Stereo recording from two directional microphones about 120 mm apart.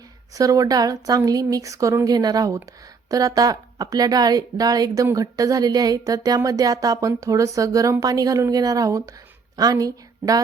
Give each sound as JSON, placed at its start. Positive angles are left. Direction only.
{"t": 0.3, "sound": "a woman's voice", "side_deg": -30}